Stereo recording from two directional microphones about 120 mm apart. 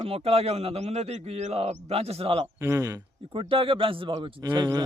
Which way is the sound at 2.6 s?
25° right (ahead or behind).